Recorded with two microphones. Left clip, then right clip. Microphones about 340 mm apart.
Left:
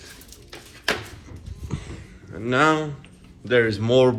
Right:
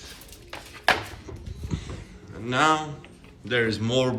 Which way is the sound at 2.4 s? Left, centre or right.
Centre.